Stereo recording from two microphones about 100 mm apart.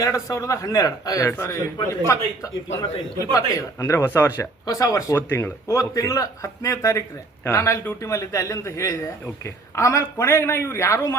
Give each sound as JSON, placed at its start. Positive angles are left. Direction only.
{"t": 0.0, "sound": "a man's voice", "side_deg": 30}
{"t": 4.6, "sound": "a man's voice", "side_deg": 35}